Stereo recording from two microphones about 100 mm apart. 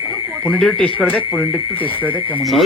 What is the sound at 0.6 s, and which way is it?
Speech, 5° left (ahead or behind).